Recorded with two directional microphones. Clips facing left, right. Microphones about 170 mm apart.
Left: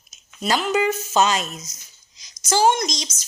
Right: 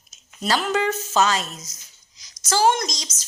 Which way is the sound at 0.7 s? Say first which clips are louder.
Left 2 dB; 10° left (ahead or behind).